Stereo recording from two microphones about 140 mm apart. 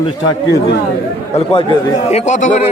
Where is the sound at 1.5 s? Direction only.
45° left (ahead or behind).